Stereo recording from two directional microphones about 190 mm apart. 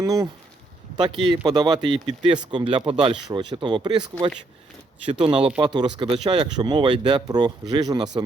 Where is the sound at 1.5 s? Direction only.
20° right (ahead or behind).